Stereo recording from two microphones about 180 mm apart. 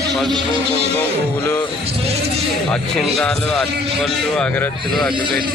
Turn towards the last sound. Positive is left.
turn(degrees=0)  # may be behind; listen again after turning